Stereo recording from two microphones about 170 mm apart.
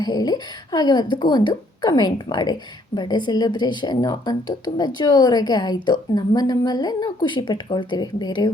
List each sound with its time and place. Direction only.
0.0 s a woman's voice: 25° left (ahead or behind)